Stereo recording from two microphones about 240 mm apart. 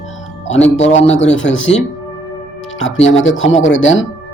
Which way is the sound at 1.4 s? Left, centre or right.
Left.